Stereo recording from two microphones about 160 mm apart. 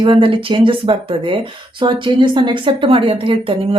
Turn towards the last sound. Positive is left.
turn(degrees=-35)  # may be behind; listen again after turning